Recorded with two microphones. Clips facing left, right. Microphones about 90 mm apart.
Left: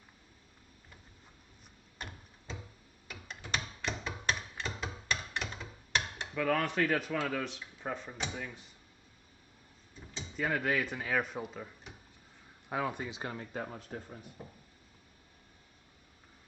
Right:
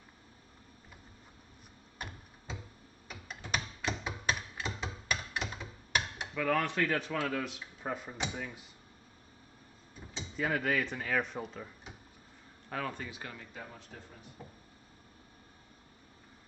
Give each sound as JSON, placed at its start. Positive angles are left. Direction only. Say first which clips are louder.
{"t": 3.1, "sound": "a sound", "louder": "right 1 dB", "side_deg": -5}
{"t": 6.3, "sound": "speech", "louder": "even", "side_deg": 0}
{"t": 10.2, "sound": "speech", "louder": "even", "side_deg": 0}
{"t": 13.3, "sound": "speech", "louder": "left 7 dB", "side_deg": 40}